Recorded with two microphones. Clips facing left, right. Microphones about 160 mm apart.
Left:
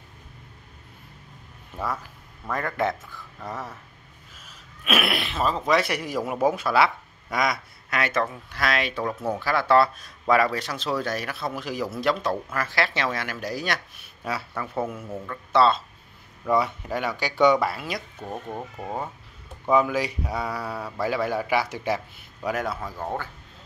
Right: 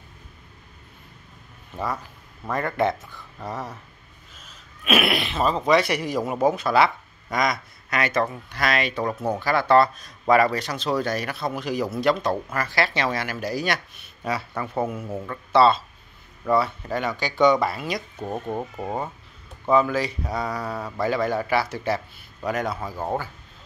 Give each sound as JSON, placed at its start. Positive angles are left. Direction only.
{"t": 2.5, "sound": "speech", "side_deg": 0}
{"t": 16.4, "sound": "speech", "side_deg": 15}
{"t": 18.2, "sound": "speech", "side_deg": -20}
{"t": 19.7, "sound": "speech", "side_deg": 10}
{"t": 22.8, "sound": "speech", "side_deg": -5}